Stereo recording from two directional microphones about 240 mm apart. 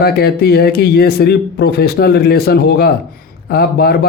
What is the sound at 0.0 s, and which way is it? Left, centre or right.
A man's voice, left.